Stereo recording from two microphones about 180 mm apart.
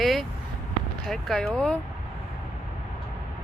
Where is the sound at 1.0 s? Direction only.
Centre (ahead or behind).